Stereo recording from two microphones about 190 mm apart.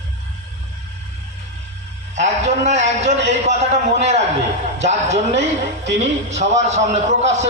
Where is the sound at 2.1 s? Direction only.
40° right (ahead or behind).